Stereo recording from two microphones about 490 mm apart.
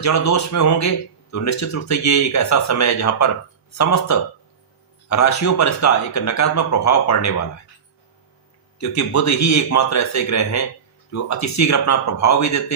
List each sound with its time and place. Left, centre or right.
0.0 s speech: left
8.8 s speech: left